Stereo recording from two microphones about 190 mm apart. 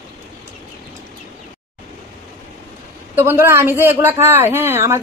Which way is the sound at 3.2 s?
15° right (ahead or behind).